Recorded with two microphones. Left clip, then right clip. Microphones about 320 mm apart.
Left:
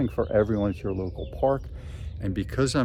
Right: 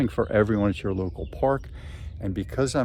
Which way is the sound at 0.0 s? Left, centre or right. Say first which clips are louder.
Right 1 dB; right.